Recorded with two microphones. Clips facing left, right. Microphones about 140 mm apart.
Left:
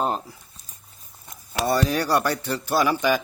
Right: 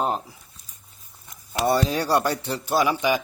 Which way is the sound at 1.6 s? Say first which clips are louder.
Right 1 dB; 20° right (ahead or behind).